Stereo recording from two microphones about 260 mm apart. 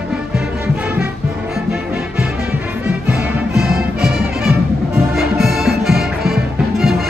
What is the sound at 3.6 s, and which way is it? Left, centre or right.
Music, right.